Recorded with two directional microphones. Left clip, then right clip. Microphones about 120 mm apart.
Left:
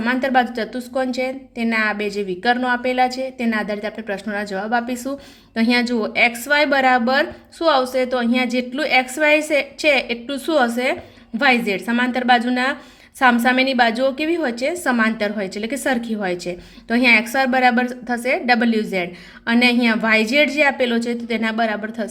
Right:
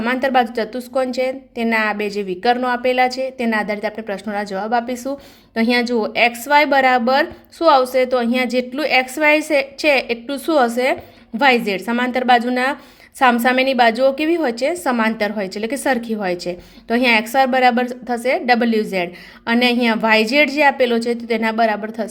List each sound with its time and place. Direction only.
0.0 s a woman's voice: 25° right (ahead or behind)